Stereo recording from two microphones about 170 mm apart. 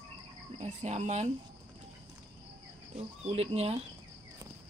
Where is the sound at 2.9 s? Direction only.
40° right (ahead or behind).